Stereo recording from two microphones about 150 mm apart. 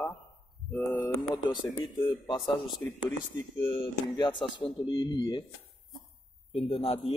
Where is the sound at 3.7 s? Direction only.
30° left (ahead or behind).